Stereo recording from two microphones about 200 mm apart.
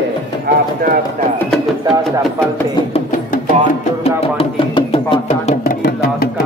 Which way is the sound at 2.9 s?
40° left (ahead or behind).